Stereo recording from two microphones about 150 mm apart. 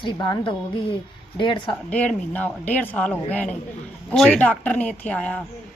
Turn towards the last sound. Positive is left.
turn(degrees=5)  # may be behind; listen again after turning